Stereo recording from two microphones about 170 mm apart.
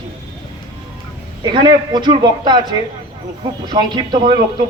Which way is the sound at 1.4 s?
25° right (ahead or behind).